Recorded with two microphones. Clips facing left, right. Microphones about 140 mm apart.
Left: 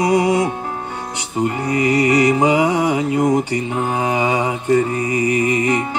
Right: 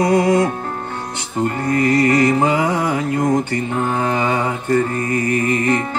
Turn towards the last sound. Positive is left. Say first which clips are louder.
# even
turn(degrees=10)  # may be behind; listen again after turning